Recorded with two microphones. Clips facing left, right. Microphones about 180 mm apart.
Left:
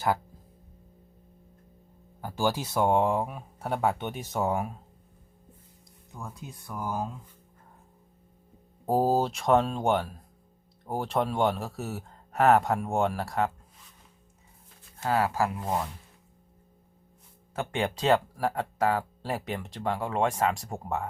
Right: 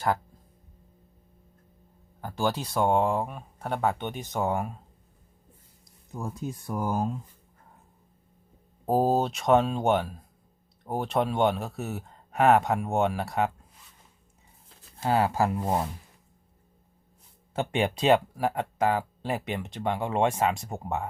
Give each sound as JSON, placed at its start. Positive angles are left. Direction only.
{"t": 2.2, "sound": "speech", "side_deg": 10}
{"t": 6.1, "sound": "speech", "side_deg": -35}
{"t": 8.9, "sound": "speech", "side_deg": 0}
{"t": 14.9, "sound": "speech", "side_deg": -25}
{"t": 17.5, "sound": "speech", "side_deg": -20}
{"t": 18.8, "sound": "speech", "side_deg": 0}
{"t": 19.6, "sound": "speech", "side_deg": -20}
{"t": 20.5, "sound": "speech", "side_deg": 0}